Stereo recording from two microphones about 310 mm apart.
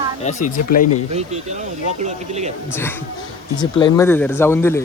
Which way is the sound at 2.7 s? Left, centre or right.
Centre.